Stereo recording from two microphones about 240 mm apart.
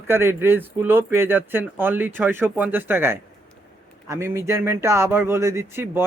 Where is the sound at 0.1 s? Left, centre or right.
Centre.